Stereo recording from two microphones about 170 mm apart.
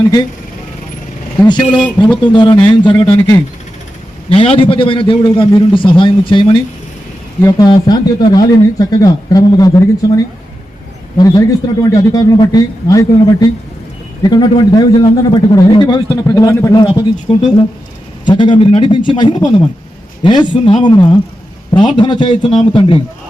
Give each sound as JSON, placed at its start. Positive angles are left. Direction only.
{"t": 1.5, "sound": "a man's voice", "side_deg": 25}
{"t": 11.2, "sound": "a man's voice", "side_deg": 20}